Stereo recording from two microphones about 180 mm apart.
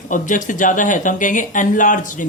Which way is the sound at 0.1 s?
45° left (ahead or behind).